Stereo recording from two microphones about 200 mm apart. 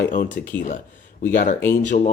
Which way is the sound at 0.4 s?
55° left (ahead or behind).